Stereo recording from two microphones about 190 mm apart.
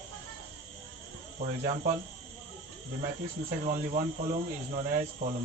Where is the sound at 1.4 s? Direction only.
40° right (ahead or behind).